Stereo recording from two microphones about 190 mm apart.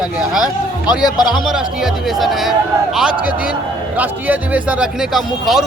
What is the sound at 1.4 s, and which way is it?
Speech, centre (ahead or behind).